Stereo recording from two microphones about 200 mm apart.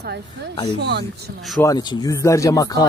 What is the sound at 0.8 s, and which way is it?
Speech, 60° right (ahead or behind).